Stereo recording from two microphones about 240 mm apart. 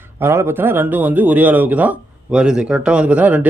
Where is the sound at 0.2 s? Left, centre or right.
Centre.